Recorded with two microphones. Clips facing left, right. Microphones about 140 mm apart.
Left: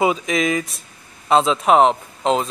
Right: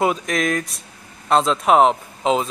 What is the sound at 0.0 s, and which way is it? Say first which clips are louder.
Speech: left 1 dB; centre (ahead or behind).